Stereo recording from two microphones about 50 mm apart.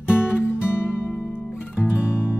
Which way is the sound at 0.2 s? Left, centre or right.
Left.